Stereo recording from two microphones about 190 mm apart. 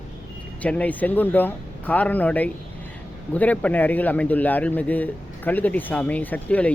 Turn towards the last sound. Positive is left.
turn(degrees=5)  # may be behind; listen again after turning